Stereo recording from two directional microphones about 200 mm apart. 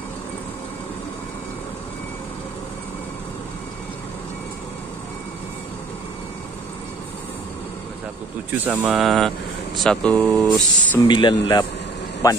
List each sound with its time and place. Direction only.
8.6 s speech: 10° right (ahead or behind)
9.0 s speech: centre (ahead or behind)
11.1 s a man's voice: 20° left (ahead or behind)